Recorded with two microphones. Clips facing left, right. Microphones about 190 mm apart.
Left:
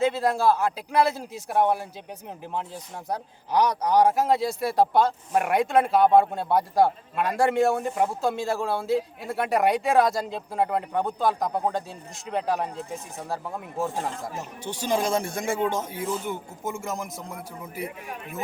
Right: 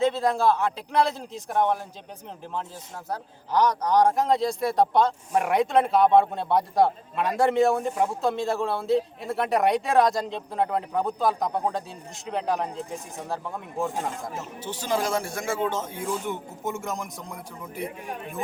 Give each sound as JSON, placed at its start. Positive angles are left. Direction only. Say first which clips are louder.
{"t": 0.0, "sound": "speech", "louder": "even", "side_deg": 5}
{"t": 3.1, "sound": "speech", "louder": "left 1 dB", "side_deg": 10}
{"t": 14.3, "sound": "speech", "louder": "even", "side_deg": 15}
{"t": 16.0, "sound": "speech", "louder": "even", "side_deg": 0}